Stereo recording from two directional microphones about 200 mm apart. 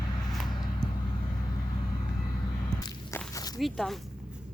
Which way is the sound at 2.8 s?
15° left (ahead or behind).